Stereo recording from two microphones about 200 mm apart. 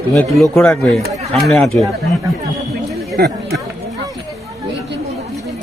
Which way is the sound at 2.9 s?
Centre (ahead or behind).